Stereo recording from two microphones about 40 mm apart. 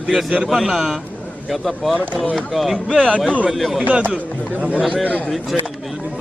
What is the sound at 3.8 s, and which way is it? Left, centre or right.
Speech, right.